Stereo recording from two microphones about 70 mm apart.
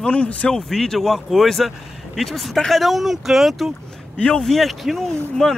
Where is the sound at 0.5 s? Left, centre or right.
Centre.